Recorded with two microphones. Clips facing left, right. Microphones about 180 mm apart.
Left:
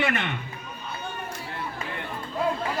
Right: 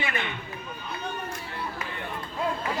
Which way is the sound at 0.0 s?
75° left (ahead or behind).